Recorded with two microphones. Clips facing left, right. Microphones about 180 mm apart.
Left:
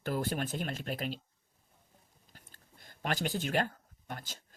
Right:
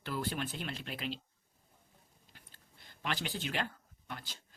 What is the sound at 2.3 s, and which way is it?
Speech, 45° left (ahead or behind).